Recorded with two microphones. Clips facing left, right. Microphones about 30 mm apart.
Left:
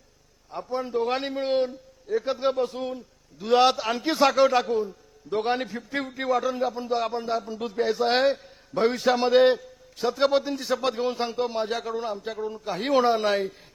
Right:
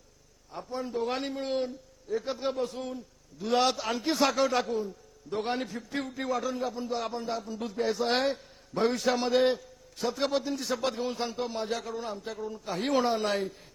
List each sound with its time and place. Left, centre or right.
0.5 s speech: left